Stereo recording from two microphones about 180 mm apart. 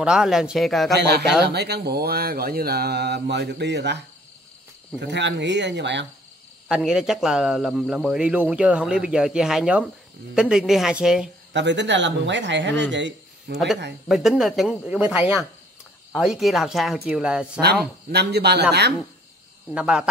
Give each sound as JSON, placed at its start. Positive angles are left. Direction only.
{"t": 0.0, "sound": "speech", "side_deg": -5}
{"t": 0.9, "sound": "speech", "side_deg": -65}
{"t": 5.0, "sound": "speech", "side_deg": -75}
{"t": 6.7, "sound": "speech", "side_deg": -5}
{"t": 11.5, "sound": "speech", "side_deg": -80}
{"t": 14.0, "sound": "speech", "side_deg": 0}
{"t": 18.1, "sound": "speech", "side_deg": -65}
{"t": 19.7, "sound": "speech", "side_deg": -5}